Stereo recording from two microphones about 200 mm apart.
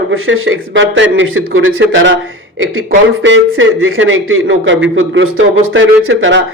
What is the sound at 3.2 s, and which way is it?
A man's voice, 75° right (ahead or behind).